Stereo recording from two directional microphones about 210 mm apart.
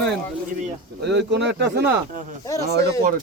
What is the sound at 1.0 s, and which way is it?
Speech, 55° right (ahead or behind).